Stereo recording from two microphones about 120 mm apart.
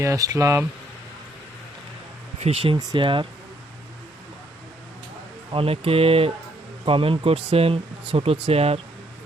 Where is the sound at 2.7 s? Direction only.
40° right (ahead or behind).